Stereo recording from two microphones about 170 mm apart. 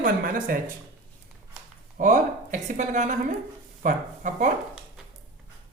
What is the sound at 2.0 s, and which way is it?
A woman's voice, 50° right (ahead or behind).